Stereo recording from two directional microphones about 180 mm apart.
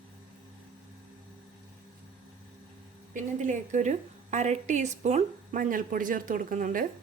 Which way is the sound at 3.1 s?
45° right (ahead or behind).